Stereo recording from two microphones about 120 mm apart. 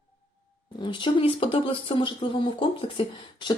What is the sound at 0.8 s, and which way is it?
Speech, 45° left (ahead or behind).